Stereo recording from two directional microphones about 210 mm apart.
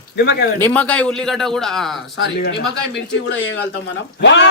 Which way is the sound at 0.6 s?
10° left (ahead or behind).